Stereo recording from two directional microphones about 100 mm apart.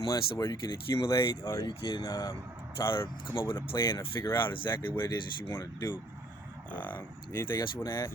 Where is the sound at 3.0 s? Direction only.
50° left (ahead or behind).